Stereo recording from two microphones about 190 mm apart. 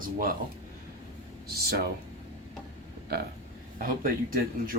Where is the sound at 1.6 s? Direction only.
55° right (ahead or behind).